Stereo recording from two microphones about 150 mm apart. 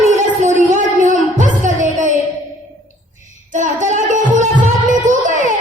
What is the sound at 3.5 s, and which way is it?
Music, 55° right (ahead or behind).